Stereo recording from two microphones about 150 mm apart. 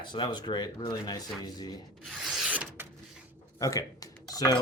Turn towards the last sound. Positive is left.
turn(degrees=25)  # may be behind; listen again after turning